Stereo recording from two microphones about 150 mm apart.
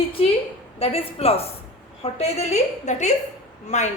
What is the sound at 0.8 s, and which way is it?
A woman's voice, 40° left (ahead or behind).